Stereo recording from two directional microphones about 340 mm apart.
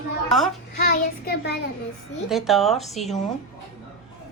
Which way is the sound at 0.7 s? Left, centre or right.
Left.